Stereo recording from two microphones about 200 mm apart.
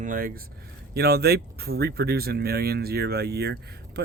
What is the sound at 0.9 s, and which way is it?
Speech, 50° right (ahead or behind).